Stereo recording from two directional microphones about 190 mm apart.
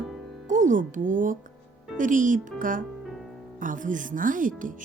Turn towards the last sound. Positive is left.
turn(degrees=-45)  # may be behind; listen again after turning